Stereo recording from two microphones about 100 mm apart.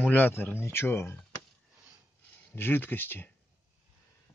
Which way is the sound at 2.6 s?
20° left (ahead or behind).